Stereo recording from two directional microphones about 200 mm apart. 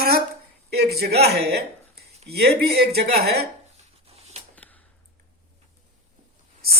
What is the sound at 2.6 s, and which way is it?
Speech, 55° right (ahead or behind).